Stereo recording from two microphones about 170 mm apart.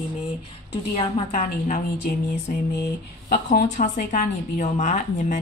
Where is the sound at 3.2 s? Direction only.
65° left (ahead or behind).